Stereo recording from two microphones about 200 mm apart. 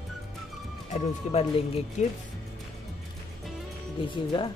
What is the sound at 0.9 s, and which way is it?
Speech, 30° left (ahead or behind).